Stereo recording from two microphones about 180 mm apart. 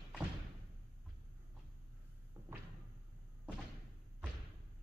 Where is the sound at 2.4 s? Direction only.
15° right (ahead or behind).